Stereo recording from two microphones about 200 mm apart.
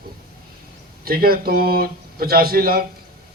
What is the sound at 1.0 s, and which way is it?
A man's voice, 50° right (ahead or behind).